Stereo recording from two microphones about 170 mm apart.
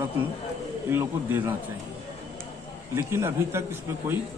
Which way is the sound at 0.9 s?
10° right (ahead or behind).